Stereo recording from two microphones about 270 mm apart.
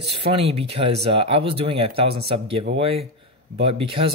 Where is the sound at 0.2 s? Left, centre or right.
Right.